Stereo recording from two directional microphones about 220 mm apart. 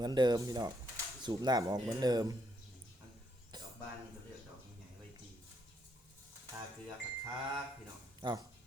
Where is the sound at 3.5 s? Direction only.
20° right (ahead or behind).